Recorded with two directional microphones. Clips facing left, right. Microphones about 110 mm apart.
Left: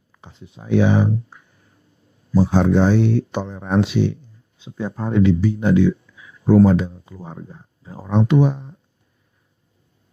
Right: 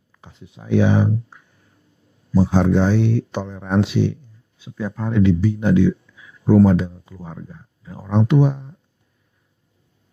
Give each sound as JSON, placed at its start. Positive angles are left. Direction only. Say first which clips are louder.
{"t": 0.1, "sound": "speech", "louder": "left 1 dB", "side_deg": 25}
{"t": 2.3, "sound": "speech", "louder": "left 1 dB", "side_deg": 20}
{"t": 2.9, "sound": "speech", "louder": "left 2 dB", "side_deg": 35}
{"t": 3.3, "sound": "speech", "louder": "left 1 dB", "side_deg": 20}